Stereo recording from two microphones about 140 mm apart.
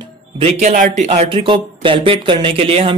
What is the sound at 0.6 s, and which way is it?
Speech, 70° right (ahead or behind).